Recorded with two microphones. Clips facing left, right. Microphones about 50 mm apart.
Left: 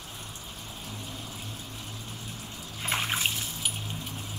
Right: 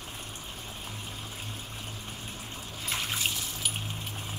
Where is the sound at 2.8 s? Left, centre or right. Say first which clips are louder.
Left 4 dB; left.